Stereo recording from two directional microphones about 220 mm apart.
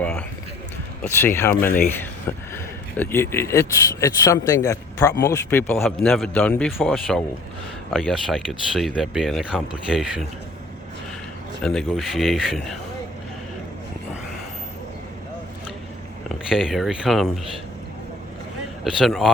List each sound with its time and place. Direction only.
0.0 s a sound: 5° left (ahead or behind)
1.2 s speech: 10° left (ahead or behind)
1.6 s speech: 40° left (ahead or behind)
3.0 s speech: 10° left (ahead or behind)
11.6 s speech: 5° left (ahead or behind)
16.5 s speech: centre (ahead or behind)
18.9 s speech: centre (ahead or behind)